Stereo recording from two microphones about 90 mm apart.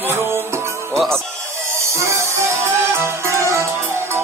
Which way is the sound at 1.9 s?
35° right (ahead or behind).